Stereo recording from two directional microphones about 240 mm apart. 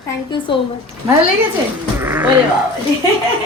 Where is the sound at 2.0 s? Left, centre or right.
Centre.